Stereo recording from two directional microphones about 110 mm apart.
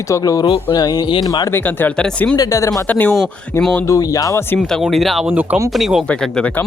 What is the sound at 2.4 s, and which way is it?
Speech, 30° left (ahead or behind).